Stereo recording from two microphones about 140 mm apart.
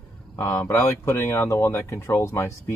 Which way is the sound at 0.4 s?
20° left (ahead or behind).